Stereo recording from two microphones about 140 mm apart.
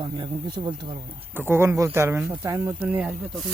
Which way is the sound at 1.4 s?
15° right (ahead or behind).